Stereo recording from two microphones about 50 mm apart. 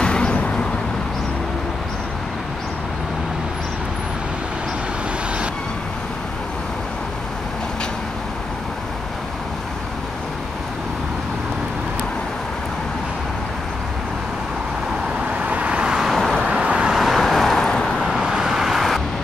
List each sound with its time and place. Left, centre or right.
0.0 s vehicle: centre
15.3 s vehicle: right
16.1 s vehicle: centre
16.4 s vehicle: centre
16.9 s vehicle: centre
18.2 s vehicle: centre